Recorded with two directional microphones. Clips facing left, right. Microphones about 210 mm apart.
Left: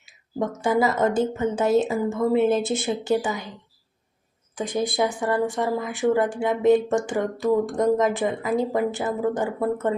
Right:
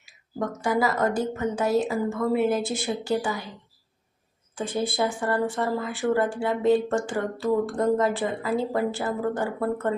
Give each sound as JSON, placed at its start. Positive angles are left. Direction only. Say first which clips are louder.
{"t": 0.0, "sound": "a woman's voice", "louder": "left 3 dB", "side_deg": 25}
{"t": 4.5, "sound": "speech", "louder": "left 2 dB", "side_deg": 15}